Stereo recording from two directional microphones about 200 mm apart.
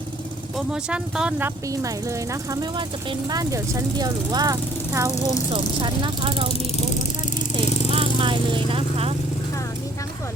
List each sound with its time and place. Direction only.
0.5 s speech: 5° right (ahead or behind)
5.1 s speech: 15° left (ahead or behind)
5.5 s speech: 25° right (ahead or behind)
7.9 s speech: 25° right (ahead or behind)